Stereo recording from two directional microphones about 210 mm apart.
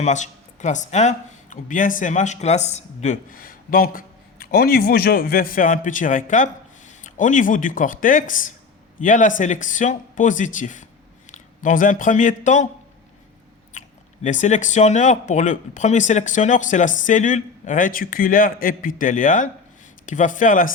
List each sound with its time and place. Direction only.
0.0 s speech: 35° left (ahead or behind)
13.7 s speech: 35° left (ahead or behind)